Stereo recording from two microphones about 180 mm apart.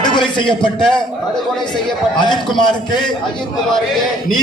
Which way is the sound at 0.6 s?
25° left (ahead or behind).